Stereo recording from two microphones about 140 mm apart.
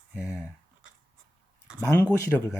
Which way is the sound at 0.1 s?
5° left (ahead or behind).